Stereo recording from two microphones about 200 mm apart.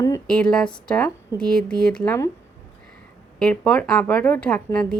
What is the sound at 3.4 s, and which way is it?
A woman's voice, 5° left (ahead or behind).